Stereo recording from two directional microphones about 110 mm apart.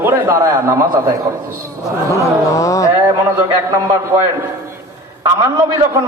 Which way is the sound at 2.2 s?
30° left (ahead or behind).